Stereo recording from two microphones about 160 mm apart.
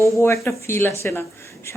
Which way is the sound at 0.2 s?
15° left (ahead or behind).